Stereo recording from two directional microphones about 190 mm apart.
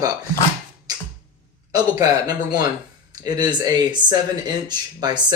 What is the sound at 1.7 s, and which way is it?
Speech, 20° right (ahead or behind).